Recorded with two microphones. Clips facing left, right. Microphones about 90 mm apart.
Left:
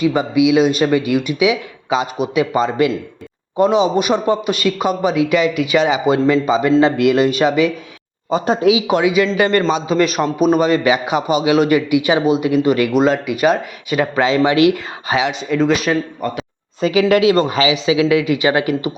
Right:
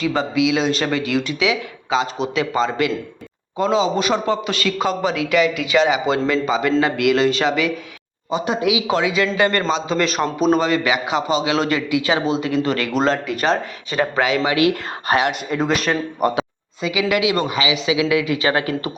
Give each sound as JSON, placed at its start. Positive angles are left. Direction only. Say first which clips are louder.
{"t": 0.0, "sound": "a man's voice", "louder": "left 4 dB", "side_deg": 15}
{"t": 8.3, "sound": "speech", "louder": "left 5 dB", "side_deg": 35}
{"t": 8.9, "sound": "a man's voice", "louder": "left 4 dB", "side_deg": 15}
{"t": 10.7, "sound": "a man's voice", "louder": "left 4 dB", "side_deg": 20}
{"t": 14.2, "sound": "a man's voice", "louder": "left 5 dB", "side_deg": 25}
{"t": 15.4, "sound": "speech", "louder": "left 4 dB", "side_deg": -5}
{"t": 16.2, "sound": "speech", "louder": "right 4 dB", "side_deg": -15}
{"t": 16.8, "sound": "speech", "louder": "left 7 dB", "side_deg": 40}